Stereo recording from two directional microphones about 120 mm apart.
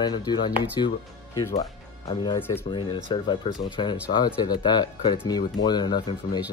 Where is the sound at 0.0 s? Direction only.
35° left (ahead or behind).